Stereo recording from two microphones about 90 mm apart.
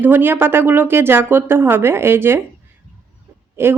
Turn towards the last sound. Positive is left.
turn(degrees=-25)  # may be behind; listen again after turning